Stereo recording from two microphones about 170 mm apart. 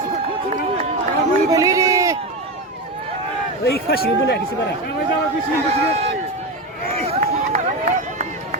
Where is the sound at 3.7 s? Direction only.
65° left (ahead or behind).